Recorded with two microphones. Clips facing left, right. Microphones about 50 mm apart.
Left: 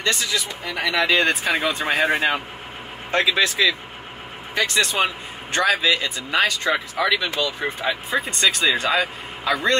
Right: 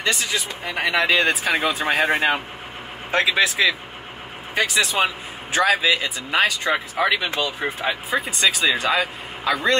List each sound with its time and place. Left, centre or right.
0.0 s speech: centre
0.3 s speech: right
0.9 s a man's voice: centre
7.0 s speech: right
7.6 s a man's voice: centre